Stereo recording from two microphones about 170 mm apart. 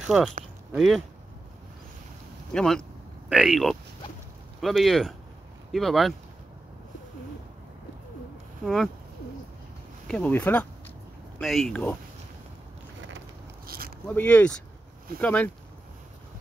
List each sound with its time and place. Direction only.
0.0 s speech: 5° right (ahead or behind)
2.5 s speech: 5° left (ahead or behind)
8.6 s speech: centre (ahead or behind)
10.0 s speech: 10° left (ahead or behind)
13.7 s zipper: 60° right (ahead or behind)
14.0 s speech: 10° left (ahead or behind)